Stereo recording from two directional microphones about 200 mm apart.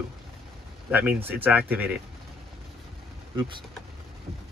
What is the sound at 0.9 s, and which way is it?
Speech, 10° right (ahead or behind).